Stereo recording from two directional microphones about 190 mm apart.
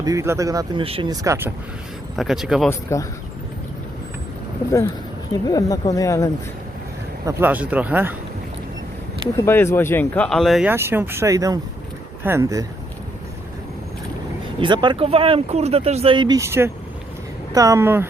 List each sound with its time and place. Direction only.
0.0 s speech: 15° right (ahead or behind)
0.9 s speech: 30° right (ahead or behind)
1.1 s speech: 15° right (ahead or behind)
2.1 s speech: centre (ahead or behind)
2.6 s speech: 15° left (ahead or behind)
5.3 s speech: 20° left (ahead or behind)
7.3 s speech: 10° right (ahead or behind)
9.3 s speech: 15° left (ahead or behind); by 12.6 s 20° right (ahead or behind)
14.6 s speech: 25° right (ahead or behind)